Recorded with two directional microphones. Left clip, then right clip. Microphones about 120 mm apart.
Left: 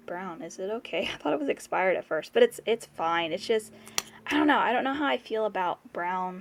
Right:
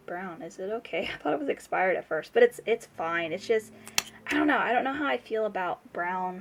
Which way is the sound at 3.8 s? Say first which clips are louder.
Right 3 dB; centre (ahead or behind).